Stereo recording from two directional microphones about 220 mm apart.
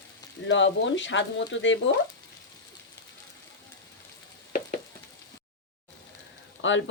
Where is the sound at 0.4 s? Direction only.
55° left (ahead or behind).